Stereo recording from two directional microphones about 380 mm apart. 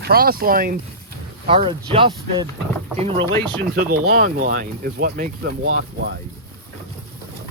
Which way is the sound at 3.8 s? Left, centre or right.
Right.